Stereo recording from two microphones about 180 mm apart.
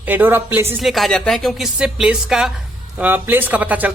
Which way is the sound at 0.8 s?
Centre (ahead or behind).